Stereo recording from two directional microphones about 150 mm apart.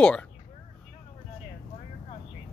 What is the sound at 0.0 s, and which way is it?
Speech, 5° left (ahead or behind).